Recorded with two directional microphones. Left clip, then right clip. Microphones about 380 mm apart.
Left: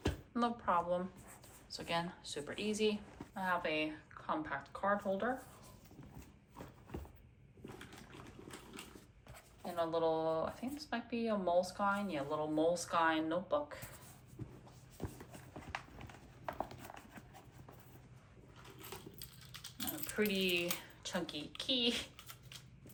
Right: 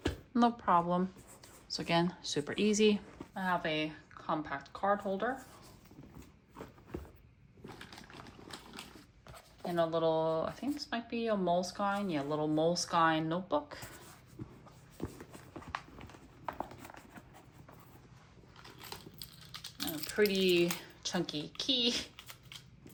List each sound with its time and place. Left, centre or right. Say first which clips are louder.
0.0 s speech: right 6 dB; centre
7.6 s a sound: right 3 dB; right
9.3 s speech: right 7 dB; centre
15.3 s clip-clop: right 3 dB; centre
16.5 s a sound: right 2 dB; centre
19.2 s typing: right 5 dB; right
20.1 s speech: right 7 dB; centre